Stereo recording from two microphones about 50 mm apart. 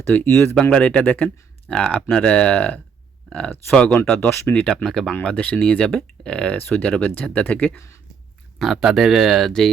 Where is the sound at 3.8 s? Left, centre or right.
Left.